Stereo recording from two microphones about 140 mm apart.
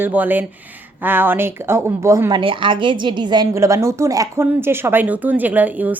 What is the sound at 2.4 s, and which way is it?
A woman's voice, 35° right (ahead or behind).